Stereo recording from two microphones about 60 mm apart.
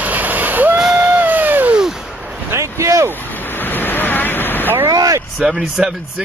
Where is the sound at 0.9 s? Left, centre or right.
Right.